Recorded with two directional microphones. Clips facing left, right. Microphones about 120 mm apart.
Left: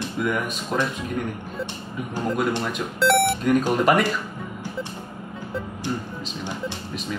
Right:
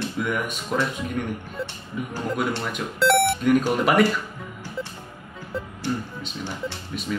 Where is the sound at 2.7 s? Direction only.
Centre (ahead or behind).